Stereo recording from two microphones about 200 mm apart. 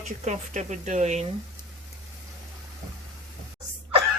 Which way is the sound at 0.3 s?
35° right (ahead or behind).